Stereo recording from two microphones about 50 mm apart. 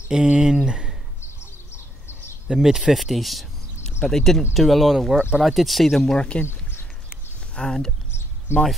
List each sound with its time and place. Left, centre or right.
0.1 s speech: centre
1.2 s bird: left
2.4 s speech: centre
6.1 s speech: left
6.4 s a sound: left
7.5 s speech: centre
8.5 s speech: left